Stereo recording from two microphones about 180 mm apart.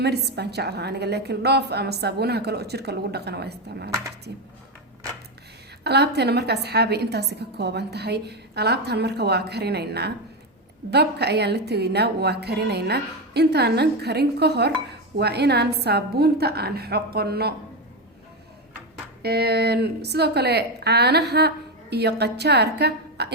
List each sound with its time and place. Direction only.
0.0 s a woman's voice: 65° right (ahead or behind)
5.8 s a woman's voice: 65° right (ahead or behind)
19.2 s a woman's voice: 60° right (ahead or behind)